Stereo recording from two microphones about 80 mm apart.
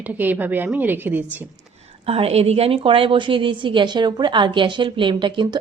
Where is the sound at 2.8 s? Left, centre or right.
Right.